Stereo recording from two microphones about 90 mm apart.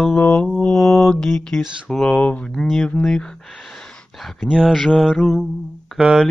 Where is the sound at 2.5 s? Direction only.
5° left (ahead or behind).